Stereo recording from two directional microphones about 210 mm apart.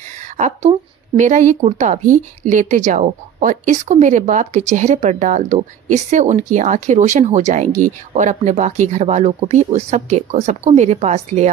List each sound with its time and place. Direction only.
0.4 s speech: 35° right (ahead or behind)